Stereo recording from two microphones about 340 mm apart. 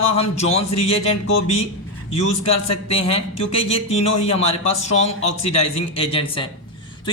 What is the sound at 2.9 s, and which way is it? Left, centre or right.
Speech, centre.